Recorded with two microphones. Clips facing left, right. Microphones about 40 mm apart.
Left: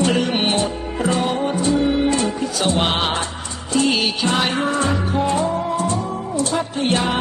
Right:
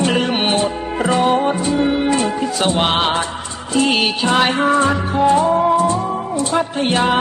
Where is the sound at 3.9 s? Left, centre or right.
Right.